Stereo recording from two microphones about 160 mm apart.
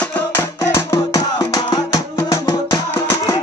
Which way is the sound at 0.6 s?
20° left (ahead or behind).